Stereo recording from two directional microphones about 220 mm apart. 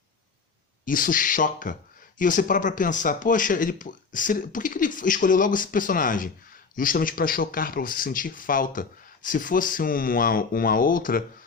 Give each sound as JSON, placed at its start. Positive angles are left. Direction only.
{"t": 0.9, "sound": "speech", "side_deg": 40}